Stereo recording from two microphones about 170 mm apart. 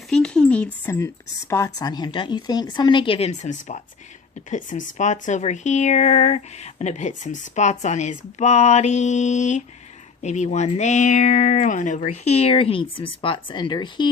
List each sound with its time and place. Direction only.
0.1 s speech: 5° left (ahead or behind); by 14.1 s 25° left (ahead or behind)